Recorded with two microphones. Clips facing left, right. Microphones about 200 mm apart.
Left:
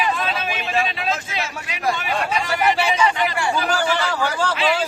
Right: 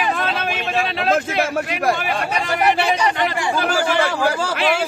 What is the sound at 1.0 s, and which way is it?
Speech, 55° right (ahead or behind).